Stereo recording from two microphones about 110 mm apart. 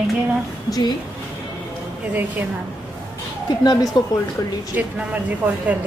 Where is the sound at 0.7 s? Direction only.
35° left (ahead or behind).